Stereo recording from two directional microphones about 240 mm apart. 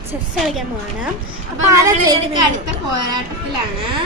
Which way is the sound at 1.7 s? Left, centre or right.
Centre.